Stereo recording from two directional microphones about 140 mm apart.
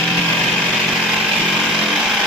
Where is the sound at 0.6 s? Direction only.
5° right (ahead or behind).